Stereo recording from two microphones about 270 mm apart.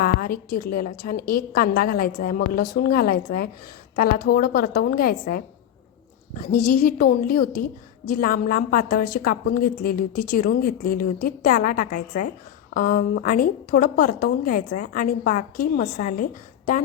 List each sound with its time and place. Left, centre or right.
0.0 s a woman's voice: left
6.5 s a woman's voice: left